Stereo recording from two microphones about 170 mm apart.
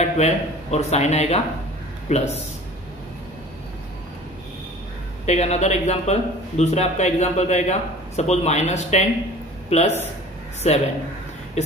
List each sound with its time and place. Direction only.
0.0 s a man's voice: 40° left (ahead or behind)
5.2 s a man's voice: 40° left (ahead or behind)